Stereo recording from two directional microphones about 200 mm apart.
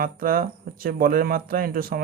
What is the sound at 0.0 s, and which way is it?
Speech, 45° right (ahead or behind).